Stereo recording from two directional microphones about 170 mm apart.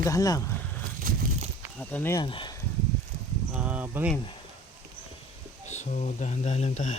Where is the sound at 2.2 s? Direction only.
30° left (ahead or behind).